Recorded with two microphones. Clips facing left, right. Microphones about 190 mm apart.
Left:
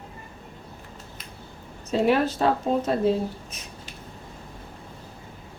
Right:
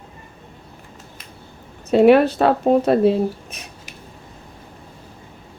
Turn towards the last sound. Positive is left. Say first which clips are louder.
# right 2 dB
turn(degrees=-65)  # may be behind; listen again after turning